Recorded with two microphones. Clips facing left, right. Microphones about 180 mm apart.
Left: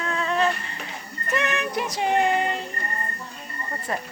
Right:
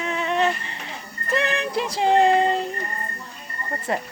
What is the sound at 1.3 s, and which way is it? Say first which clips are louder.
Music: right 2 dB; 30° right (ahead or behind).